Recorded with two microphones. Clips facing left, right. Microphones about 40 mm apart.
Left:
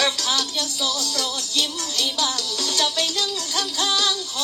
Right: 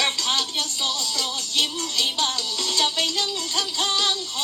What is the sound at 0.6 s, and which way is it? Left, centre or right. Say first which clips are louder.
Music: left 1 dB; left.